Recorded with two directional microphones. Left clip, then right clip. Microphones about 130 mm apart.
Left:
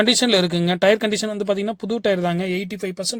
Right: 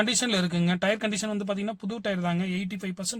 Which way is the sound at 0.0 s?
45° left (ahead or behind).